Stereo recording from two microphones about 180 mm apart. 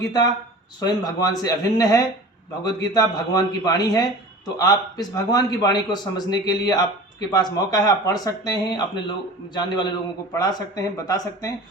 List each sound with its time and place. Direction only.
0.0 s a man's voice: 20° left (ahead or behind)